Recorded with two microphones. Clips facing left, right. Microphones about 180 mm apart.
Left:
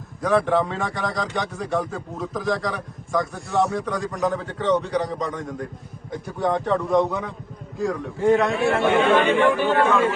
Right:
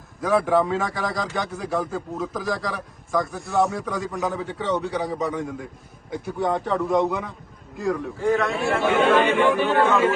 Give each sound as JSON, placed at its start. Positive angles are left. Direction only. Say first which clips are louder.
{"t": 0.2, "sound": "a man's voice", "louder": "even", "side_deg": 0}
{"t": 8.2, "sound": "a man's voice", "louder": "left 4 dB", "side_deg": 20}
{"t": 8.5, "sound": "a man's voice", "louder": "left 2 dB", "side_deg": 0}